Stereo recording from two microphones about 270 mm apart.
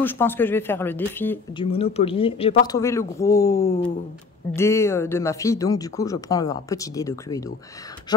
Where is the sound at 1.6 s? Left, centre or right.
Left.